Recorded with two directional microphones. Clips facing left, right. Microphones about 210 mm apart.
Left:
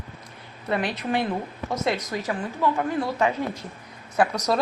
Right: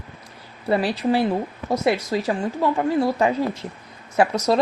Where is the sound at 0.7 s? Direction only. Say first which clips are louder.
Right 5 dB; 30° right (ahead or behind).